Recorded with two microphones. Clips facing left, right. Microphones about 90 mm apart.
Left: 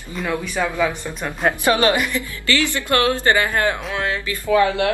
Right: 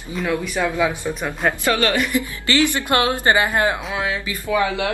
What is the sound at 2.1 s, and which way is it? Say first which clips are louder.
A woman's voice: right 2 dB; 20° right (ahead or behind).